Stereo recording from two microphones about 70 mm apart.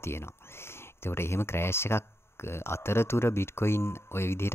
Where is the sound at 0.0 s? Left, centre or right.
Left.